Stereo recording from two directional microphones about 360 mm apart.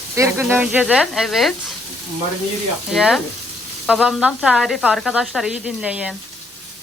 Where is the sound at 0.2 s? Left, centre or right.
Centre.